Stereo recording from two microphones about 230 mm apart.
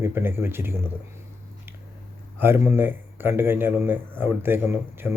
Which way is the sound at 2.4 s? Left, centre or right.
Centre.